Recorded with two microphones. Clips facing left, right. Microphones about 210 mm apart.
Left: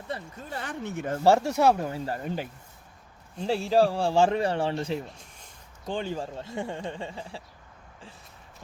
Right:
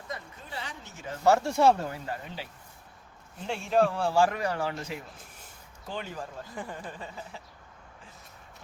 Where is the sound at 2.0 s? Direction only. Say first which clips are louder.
Left 6 dB; 45° left (ahead or behind).